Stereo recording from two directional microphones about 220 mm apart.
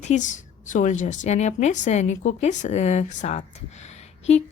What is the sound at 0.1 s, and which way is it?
Speech, 35° left (ahead or behind).